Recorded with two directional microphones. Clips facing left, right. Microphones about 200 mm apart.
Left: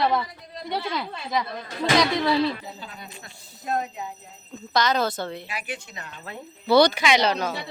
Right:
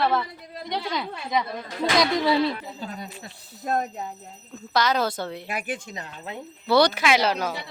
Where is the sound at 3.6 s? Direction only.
45° right (ahead or behind).